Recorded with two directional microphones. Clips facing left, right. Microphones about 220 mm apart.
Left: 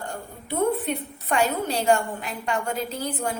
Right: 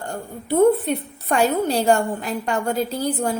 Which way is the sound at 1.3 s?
35° right (ahead or behind).